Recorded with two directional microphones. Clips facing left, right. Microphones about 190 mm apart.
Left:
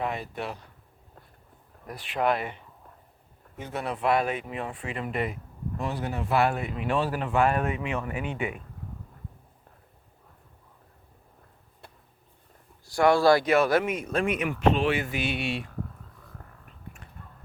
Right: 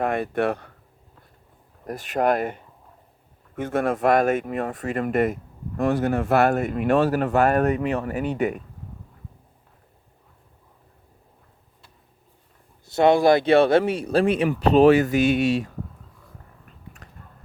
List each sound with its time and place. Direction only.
0.0 s speech: 55° right (ahead or behind)
1.9 s speech: 45° right (ahead or behind)
12.8 s speech: 20° right (ahead or behind); by 15.7 s 40° right (ahead or behind)
17.0 s a sound: 40° right (ahead or behind)